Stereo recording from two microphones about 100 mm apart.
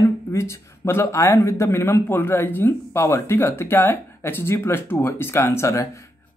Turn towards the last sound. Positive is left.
turn(degrees=30)  # may be behind; listen again after turning